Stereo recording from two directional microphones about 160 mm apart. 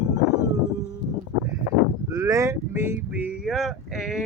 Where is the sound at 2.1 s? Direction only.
15° right (ahead or behind); by 4.2 s centre (ahead or behind).